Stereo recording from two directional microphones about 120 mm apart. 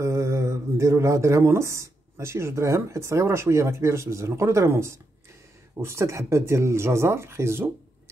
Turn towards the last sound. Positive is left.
turn(degrees=-20)  # may be behind; listen again after turning